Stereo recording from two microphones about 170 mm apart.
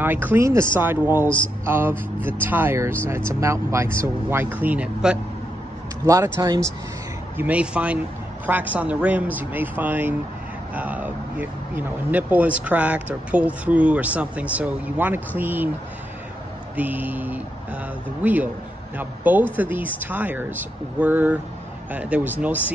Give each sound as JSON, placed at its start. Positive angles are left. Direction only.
{"t": 0.0, "sound": "speech", "side_deg": -10}
{"t": 6.0, "sound": "speech", "side_deg": -20}
{"t": 7.3, "sound": "speech", "side_deg": -10}
{"t": 16.7, "sound": "speech", "side_deg": -10}